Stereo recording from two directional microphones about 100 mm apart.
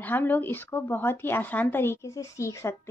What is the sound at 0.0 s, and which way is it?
Speech, 20° left (ahead or behind).